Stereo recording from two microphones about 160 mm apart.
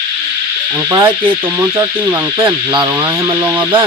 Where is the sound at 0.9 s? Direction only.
15° right (ahead or behind).